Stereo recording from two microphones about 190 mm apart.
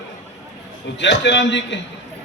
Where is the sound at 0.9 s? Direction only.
70° left (ahead or behind).